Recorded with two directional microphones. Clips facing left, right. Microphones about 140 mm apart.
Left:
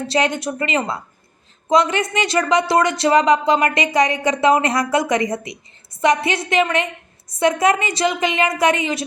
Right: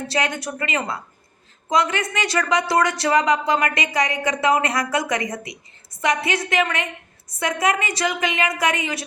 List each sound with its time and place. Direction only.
0.1 s speech: 20° left (ahead or behind)